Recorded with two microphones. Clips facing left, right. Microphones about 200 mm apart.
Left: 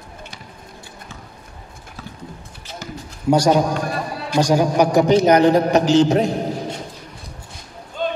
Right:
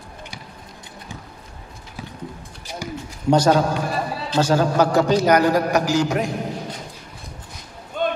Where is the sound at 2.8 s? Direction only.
10° right (ahead or behind).